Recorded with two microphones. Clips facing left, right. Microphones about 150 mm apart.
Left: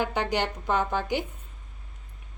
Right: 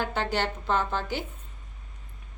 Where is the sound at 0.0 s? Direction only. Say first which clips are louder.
Left 1 dB; 15° left (ahead or behind).